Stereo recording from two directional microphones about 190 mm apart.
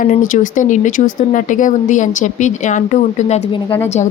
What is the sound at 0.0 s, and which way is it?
Speech, 45° left (ahead or behind).